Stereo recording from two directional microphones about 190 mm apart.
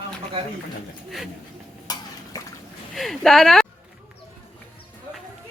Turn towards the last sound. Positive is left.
turn(degrees=0)  # may be behind; listen again after turning